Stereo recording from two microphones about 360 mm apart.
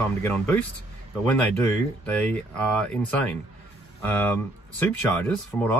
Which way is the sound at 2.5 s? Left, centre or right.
Centre.